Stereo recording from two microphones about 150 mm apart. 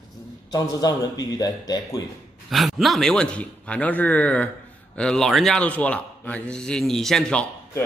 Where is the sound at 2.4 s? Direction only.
Centre (ahead or behind).